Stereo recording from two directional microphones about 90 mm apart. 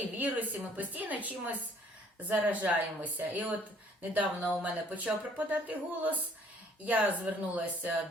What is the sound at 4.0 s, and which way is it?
A woman's voice, 15° right (ahead or behind).